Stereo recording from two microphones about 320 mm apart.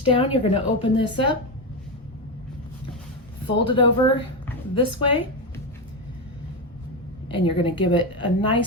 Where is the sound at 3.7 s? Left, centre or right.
Centre.